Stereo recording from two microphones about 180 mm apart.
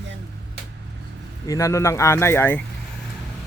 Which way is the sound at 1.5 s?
15° left (ahead or behind).